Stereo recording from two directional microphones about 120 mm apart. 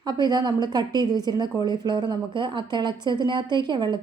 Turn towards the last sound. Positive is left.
turn(degrees=-40)  # may be behind; listen again after turning